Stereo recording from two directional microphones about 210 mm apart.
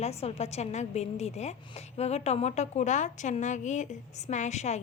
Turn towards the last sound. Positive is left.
turn(degrees=35)  # may be behind; listen again after turning